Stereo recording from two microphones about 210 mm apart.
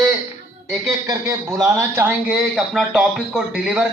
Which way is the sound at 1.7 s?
15° right (ahead or behind).